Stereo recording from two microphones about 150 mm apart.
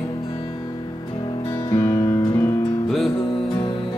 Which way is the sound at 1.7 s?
20° left (ahead or behind).